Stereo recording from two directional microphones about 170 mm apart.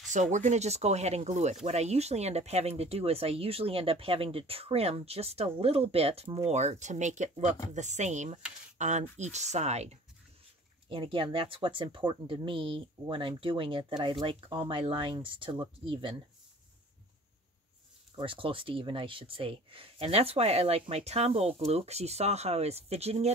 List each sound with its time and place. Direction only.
0.1 s speech: 45° right (ahead or behind)
10.9 s speech: 30° right (ahead or behind)
18.1 s speech: 30° right (ahead or behind)